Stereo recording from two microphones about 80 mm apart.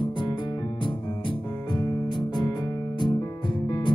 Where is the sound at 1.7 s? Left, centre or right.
Left.